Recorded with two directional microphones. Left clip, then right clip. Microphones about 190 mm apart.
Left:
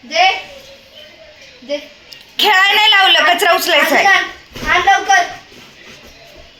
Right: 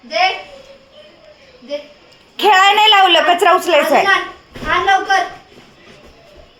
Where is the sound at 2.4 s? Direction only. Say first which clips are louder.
Right 1 dB; 30° right (ahead or behind).